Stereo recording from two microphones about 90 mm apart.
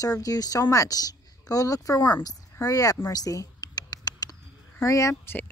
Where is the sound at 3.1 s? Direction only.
40° left (ahead or behind).